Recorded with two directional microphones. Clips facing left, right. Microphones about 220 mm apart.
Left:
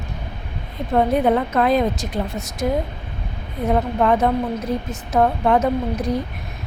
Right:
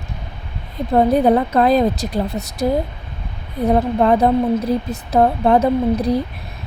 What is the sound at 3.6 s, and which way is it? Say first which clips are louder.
A woman's voice: right 3 dB; 35° right (ahead or behind).